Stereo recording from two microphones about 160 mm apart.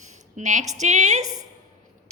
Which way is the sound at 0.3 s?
50° right (ahead or behind).